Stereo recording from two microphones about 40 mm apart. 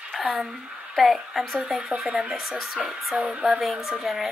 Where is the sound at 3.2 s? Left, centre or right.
Centre.